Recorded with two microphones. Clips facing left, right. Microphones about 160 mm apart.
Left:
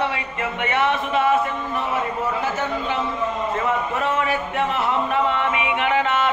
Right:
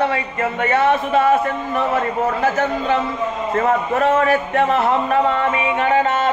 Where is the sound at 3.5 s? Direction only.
45° right (ahead or behind).